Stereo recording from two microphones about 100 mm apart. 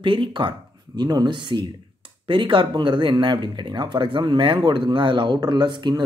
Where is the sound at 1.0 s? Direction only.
45° right (ahead or behind).